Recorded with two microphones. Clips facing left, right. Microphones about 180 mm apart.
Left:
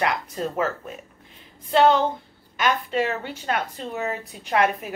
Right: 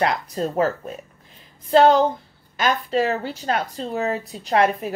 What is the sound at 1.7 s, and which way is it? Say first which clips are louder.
A woman's voice: right 3 dB; 40° right (ahead or behind).